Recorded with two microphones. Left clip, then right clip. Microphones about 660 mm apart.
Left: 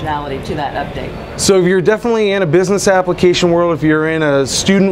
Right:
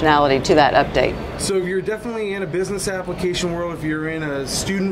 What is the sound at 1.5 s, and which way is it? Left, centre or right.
Speech, left.